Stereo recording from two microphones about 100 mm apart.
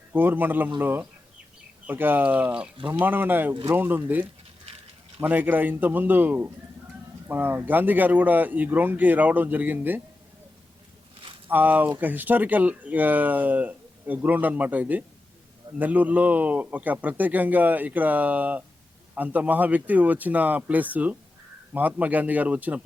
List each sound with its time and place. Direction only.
0.1 s speech: 20° right (ahead or behind)
2.7 s speech: 60° right (ahead or behind)
3.0 s speech: 20° right (ahead or behind)
11.4 s speech: 20° right (ahead or behind)